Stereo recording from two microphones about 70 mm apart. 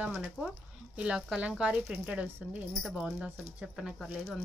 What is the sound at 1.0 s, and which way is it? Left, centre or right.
Speech, centre.